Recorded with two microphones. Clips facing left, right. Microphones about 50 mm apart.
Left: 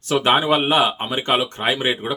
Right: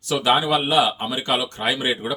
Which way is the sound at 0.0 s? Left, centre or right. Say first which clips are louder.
Left 2 dB; left.